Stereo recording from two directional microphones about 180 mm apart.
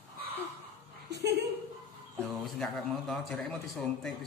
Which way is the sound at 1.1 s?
65° right (ahead or behind).